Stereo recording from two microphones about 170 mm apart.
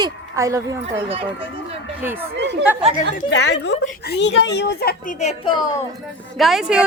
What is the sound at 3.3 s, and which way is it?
A woman's voice, 90° left.